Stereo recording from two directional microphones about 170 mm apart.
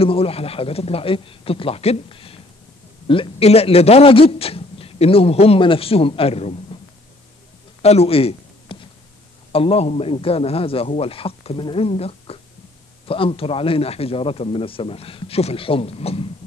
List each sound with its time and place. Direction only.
0.0 s a man's voice: 35° left (ahead or behind)
7.8 s a sound: 35° left (ahead or behind)
9.5 s a man's voice: 35° left (ahead or behind)